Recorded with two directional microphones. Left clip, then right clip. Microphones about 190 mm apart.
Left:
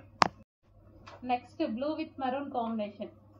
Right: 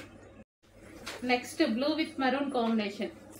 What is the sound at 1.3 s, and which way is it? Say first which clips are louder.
A woman's voice: right 3 dB; 20° right (ahead or behind).